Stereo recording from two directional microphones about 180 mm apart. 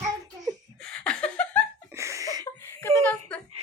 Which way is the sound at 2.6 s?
15° left (ahead or behind).